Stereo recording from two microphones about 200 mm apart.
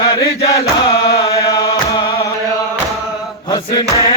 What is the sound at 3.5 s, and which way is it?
Chant, 20° left (ahead or behind).